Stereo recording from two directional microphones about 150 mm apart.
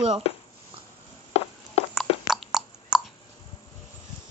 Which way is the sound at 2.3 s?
5° right (ahead or behind).